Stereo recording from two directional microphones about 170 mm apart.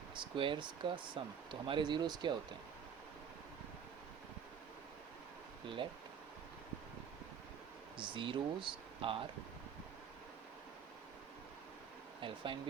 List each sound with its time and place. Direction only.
0.1 s speech: 30° right (ahead or behind)
5.6 s speech: 30° right (ahead or behind)
7.9 s speech: 30° right (ahead or behind)
12.2 s speech: 30° right (ahead or behind)